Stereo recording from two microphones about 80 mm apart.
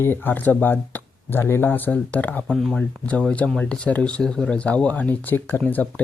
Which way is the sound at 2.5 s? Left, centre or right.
Centre.